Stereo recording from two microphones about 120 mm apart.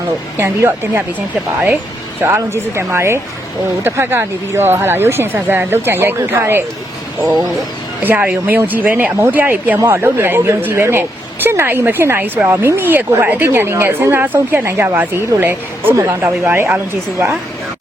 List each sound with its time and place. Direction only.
0.3 s speech: 20° right (ahead or behind)
2.2 s speech: 20° right (ahead or behind)
8.0 s speech: 15° right (ahead or behind)